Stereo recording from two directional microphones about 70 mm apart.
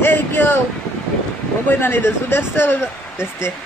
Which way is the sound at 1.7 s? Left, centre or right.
Left.